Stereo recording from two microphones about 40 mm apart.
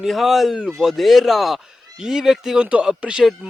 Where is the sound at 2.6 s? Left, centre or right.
Right.